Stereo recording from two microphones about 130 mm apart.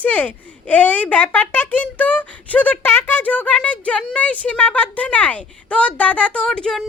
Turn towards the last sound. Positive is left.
turn(degrees=5)  # may be behind; listen again after turning